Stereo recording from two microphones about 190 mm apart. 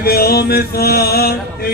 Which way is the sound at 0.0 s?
55° left (ahead or behind).